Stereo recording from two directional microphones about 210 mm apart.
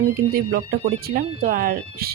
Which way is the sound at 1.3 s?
25° right (ahead or behind).